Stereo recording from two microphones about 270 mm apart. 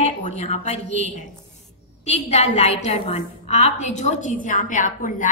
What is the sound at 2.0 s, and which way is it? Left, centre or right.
A woman's voice, left.